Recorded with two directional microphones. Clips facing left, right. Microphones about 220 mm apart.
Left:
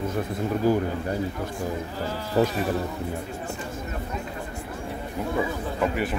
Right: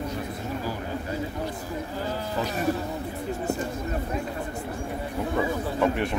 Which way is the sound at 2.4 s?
50° left (ahead or behind).